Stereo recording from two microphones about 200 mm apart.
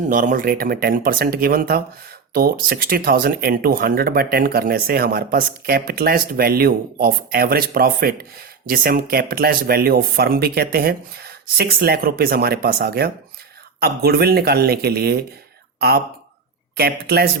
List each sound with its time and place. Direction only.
0.1 s speech: 40° right (ahead or behind)
16.7 s speech: 50° right (ahead or behind)